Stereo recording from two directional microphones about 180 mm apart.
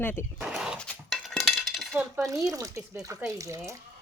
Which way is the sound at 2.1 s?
20° right (ahead or behind).